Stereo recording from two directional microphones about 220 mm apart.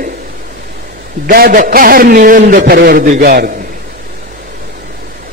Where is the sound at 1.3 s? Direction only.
40° right (ahead or behind).